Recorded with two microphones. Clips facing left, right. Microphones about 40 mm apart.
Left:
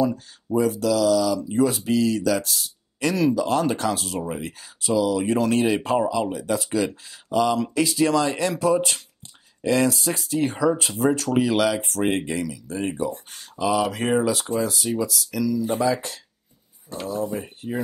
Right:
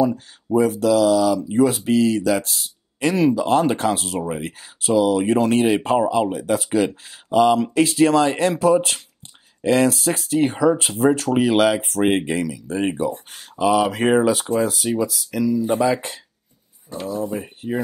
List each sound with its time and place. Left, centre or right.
0.0 s speech: right
4.2 s speech: right
4.5 s speech: right
11.3 s speech: right
15.0 s speech: right
16.9 s speech: centre
17.6 s speech: right